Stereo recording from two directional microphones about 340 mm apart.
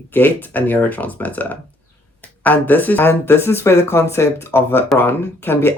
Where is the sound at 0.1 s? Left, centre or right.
Centre.